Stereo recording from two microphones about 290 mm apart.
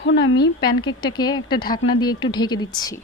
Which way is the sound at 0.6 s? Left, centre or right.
Centre.